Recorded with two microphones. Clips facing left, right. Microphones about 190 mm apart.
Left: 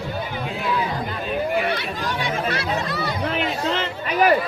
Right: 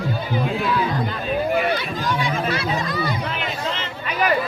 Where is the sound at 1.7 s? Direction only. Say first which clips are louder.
Right 3 dB; 65° left (ahead or behind).